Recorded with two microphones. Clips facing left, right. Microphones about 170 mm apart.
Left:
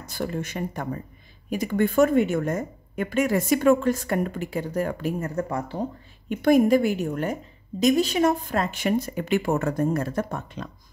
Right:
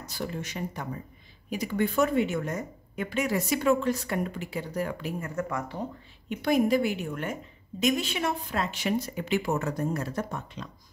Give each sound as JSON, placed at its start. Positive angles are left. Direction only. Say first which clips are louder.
{"t": 0.0, "sound": "speech", "louder": "left 5 dB", "side_deg": 50}
{"t": 5.3, "sound": "speech", "louder": "left 4 dB", "side_deg": 30}
{"t": 6.2, "sound": "speech", "louder": "left 6 dB", "side_deg": 50}